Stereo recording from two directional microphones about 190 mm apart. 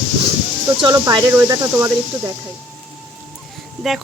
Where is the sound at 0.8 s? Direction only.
20° right (ahead or behind).